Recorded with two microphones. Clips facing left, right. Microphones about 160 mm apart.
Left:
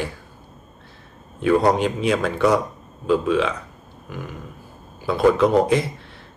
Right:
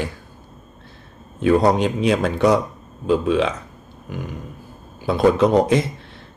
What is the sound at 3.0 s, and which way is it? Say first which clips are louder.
Speech: right 1 dB; 25° right (ahead or behind).